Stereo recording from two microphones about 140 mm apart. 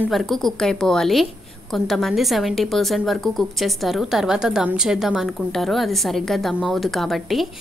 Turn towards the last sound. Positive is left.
turn(degrees=0)  # may be behind; listen again after turning